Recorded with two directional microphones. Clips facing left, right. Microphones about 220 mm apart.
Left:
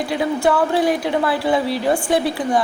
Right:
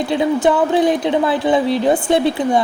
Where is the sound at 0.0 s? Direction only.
20° right (ahead or behind).